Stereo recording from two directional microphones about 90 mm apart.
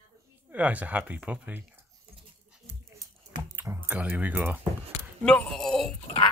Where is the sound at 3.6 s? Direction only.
30° right (ahead or behind).